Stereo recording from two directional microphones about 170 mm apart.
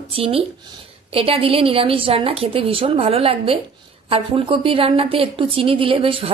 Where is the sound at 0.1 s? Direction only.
35° right (ahead or behind).